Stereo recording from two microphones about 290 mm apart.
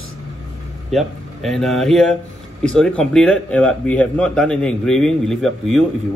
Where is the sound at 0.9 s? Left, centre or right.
Centre.